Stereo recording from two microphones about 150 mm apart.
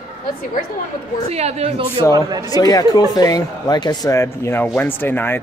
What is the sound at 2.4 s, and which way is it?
A man's voice, 25° left (ahead or behind).